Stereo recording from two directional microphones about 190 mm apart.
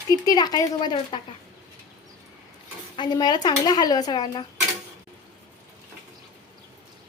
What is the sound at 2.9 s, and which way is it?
Speech, 25° left (ahead or behind).